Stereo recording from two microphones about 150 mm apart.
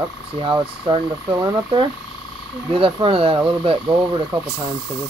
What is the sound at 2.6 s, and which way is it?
Speech, 35° right (ahead or behind).